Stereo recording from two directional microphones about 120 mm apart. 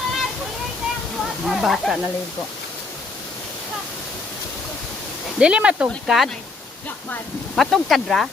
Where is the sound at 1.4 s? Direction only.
Centre (ahead or behind).